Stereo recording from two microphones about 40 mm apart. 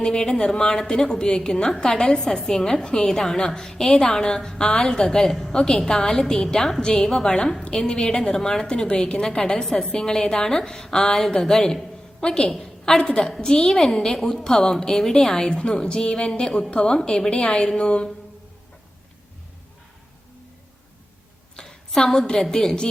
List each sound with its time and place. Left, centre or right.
0.0 s a woman's voice: centre
12.2 s music: centre
12.5 s a woman's voice: centre
15.4 s music: left
21.5 s a woman's voice: centre